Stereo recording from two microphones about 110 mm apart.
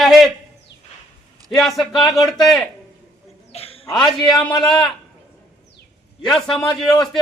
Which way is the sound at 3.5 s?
70° left (ahead or behind).